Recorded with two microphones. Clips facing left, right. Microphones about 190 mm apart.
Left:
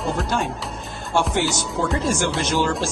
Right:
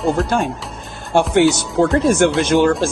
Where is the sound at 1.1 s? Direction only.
55° right (ahead or behind).